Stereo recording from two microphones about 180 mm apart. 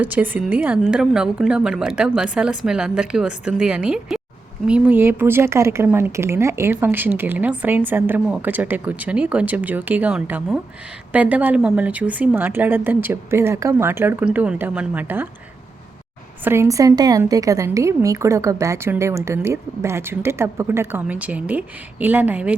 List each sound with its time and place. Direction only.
0.0 s a woman's voice: 10° right (ahead or behind)
16.4 s speech: 15° right (ahead or behind)